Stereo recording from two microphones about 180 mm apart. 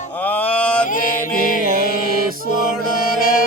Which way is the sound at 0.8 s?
50° left (ahead or behind).